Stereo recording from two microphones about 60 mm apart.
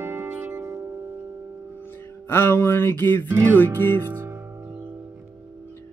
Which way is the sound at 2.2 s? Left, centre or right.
Left.